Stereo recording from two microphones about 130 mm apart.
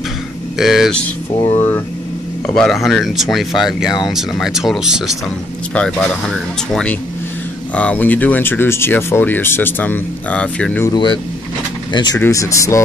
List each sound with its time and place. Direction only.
0.6 s speech: centre (ahead or behind)
1.5 s speech: 20° left (ahead or behind)
2.4 s speech: 5° left (ahead or behind)
5.8 s speech: 10° left (ahead or behind)
10.9 s speech: 35° left (ahead or behind)
12.2 s speech: 25° left (ahead or behind)